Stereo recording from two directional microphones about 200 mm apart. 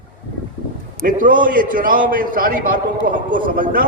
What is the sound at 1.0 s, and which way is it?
A man's voice, 45° right (ahead or behind).